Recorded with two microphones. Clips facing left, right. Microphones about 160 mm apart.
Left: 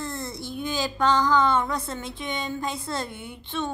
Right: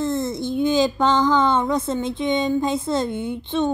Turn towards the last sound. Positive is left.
turn(degrees=-20)  # may be behind; listen again after turning